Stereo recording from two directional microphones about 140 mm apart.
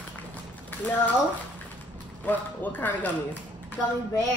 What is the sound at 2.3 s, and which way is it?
A man's voice, 15° left (ahead or behind).